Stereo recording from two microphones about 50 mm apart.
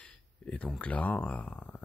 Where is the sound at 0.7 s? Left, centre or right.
Left.